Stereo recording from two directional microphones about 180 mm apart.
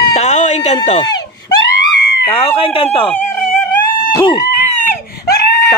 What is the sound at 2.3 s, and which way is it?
Speech, 30° left (ahead or behind).